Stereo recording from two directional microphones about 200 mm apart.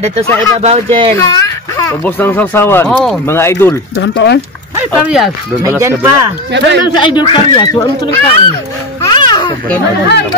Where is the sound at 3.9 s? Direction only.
60° left (ahead or behind).